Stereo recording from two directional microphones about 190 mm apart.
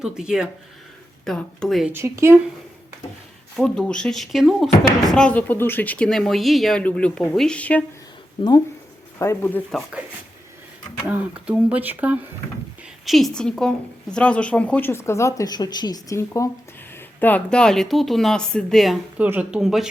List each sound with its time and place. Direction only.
0.0 s speech: 5° right (ahead or behind)
1.9 s speech: 15° right (ahead or behind)
3.6 s speech: 5° left (ahead or behind)
8.4 s a woman's voice: 20° left (ahead or behind)
9.7 s speech: centre (ahead or behind)
11.1 s a woman's voice: 5° right (ahead or behind)